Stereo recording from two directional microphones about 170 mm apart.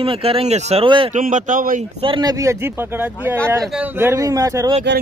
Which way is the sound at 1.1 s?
50° right (ahead or behind).